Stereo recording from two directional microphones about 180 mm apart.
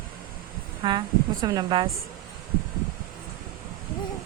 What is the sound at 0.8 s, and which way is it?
A woman's voice, 25° right (ahead or behind).